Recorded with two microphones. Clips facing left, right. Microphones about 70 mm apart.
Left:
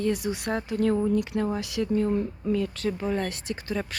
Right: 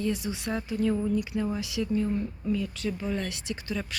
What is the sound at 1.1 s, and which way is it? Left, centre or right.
Speech, left.